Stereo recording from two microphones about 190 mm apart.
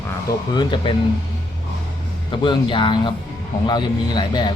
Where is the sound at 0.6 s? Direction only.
25° left (ahead or behind).